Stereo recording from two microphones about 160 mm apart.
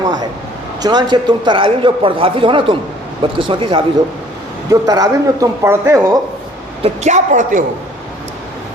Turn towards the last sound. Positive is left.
turn(degrees=-55)  # may be behind; listen again after turning